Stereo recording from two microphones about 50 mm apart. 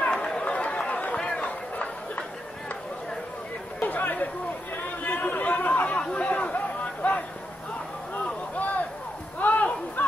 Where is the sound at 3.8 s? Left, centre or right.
Left.